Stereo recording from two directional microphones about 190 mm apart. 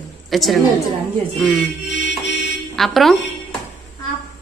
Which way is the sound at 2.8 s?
Centre (ahead or behind).